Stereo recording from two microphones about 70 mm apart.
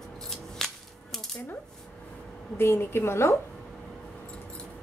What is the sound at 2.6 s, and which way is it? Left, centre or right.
Speech, left.